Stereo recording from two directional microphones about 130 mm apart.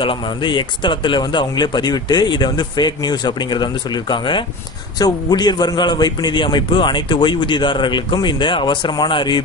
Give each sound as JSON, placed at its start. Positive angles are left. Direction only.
{"t": 0.0, "sound": "speech", "side_deg": 40}